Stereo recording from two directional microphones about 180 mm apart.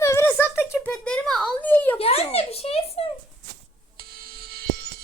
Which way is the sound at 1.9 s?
35° left (ahead or behind).